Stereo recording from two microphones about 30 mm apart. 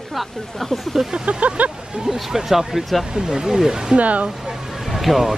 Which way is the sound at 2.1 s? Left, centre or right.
Centre.